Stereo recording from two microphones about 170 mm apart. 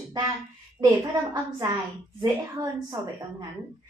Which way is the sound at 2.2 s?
20° right (ahead or behind).